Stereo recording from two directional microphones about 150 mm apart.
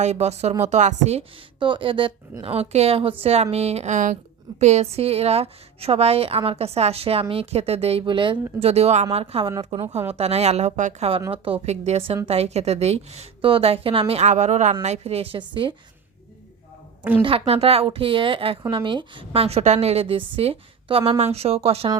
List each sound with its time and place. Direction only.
0.0 s a woman's voice: 50° right (ahead or behind)
1.5 s a woman's voice: 35° right (ahead or behind)
8.6 s a woman's voice: 45° right (ahead or behind)
11.3 s a woman's voice: 40° right (ahead or behind)
17.0 s a woman's voice: 10° right (ahead or behind)
17.2 s a woman's voice: 40° right (ahead or behind)